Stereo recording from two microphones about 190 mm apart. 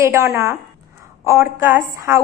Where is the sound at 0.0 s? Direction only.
15° right (ahead or behind).